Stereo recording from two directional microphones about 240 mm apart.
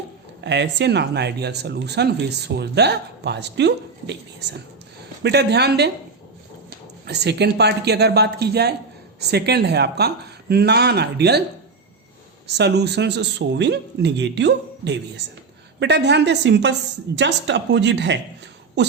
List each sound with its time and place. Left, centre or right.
0.4 s speech: right
7.1 s speech: right
12.5 s speech: right